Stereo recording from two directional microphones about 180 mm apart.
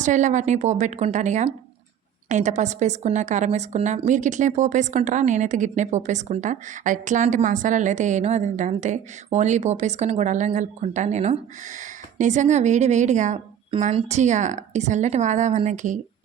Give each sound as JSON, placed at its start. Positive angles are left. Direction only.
{"t": 0.0, "sound": "a woman's voice", "side_deg": -45}